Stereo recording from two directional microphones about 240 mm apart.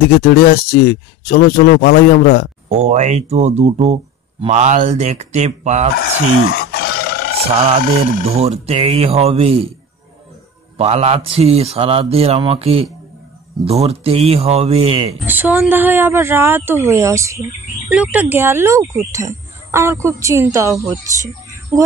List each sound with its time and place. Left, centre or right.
0.2 s speech: left
2.7 s speech: right
5.9 s a sound: left
8.4 s speech: right
10.8 s speech: right
15.2 s speech: centre